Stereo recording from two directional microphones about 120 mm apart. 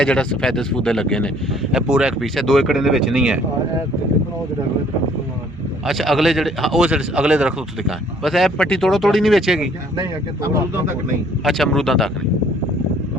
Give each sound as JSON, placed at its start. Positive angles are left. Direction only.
{"t": 0.0, "sound": "speech", "side_deg": 10}
{"t": 1.7, "sound": "a man's voice", "side_deg": -5}
{"t": 5.8, "sound": "a man's voice", "side_deg": 0}
{"t": 10.4, "sound": "speech", "side_deg": -25}
{"t": 11.4, "sound": "a man's voice", "side_deg": 0}